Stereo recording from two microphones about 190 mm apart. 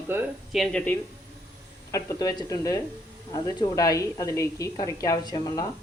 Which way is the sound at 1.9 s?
20° left (ahead or behind).